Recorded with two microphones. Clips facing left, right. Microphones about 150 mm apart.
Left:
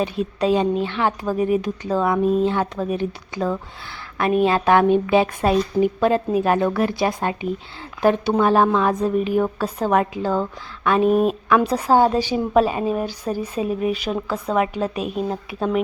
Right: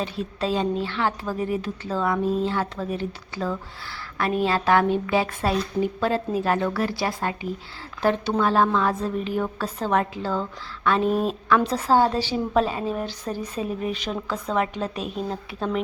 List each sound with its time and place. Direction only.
0.0 s a woman's voice: 15° left (ahead or behind)